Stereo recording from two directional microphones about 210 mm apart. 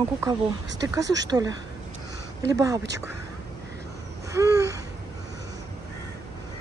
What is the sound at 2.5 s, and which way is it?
Speech, 15° right (ahead or behind).